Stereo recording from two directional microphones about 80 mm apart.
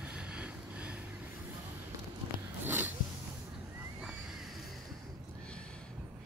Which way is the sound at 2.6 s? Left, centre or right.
Right.